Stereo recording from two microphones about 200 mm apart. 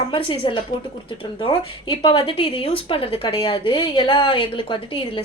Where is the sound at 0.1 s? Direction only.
25° left (ahead or behind).